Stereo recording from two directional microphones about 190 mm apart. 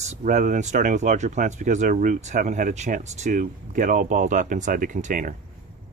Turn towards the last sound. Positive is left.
turn(degrees=-45)  # may be behind; listen again after turning